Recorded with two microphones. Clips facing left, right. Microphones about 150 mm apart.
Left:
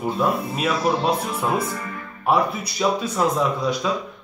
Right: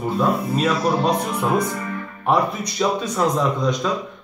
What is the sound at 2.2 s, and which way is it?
A man's voice, 5° left (ahead or behind).